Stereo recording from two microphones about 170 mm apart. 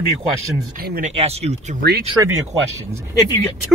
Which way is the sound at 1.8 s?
65° right (ahead or behind).